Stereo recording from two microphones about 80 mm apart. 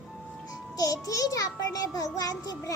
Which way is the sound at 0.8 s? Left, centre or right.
Left.